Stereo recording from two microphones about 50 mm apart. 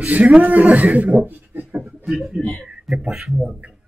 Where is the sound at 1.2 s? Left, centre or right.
Right.